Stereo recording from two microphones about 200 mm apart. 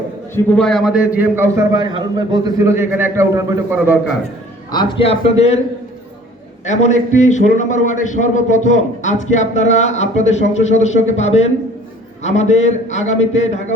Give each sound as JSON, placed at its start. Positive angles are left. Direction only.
{"t": 0.3, "sound": "a man's voice", "side_deg": 5}
{"t": 4.7, "sound": "a man's voice", "side_deg": 20}
{"t": 6.7, "sound": "a man's voice", "side_deg": 35}